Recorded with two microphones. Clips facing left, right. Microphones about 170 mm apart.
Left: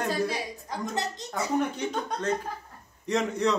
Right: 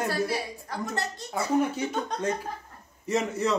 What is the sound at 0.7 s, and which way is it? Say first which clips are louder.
Speech: even; 15° left (ahead or behind).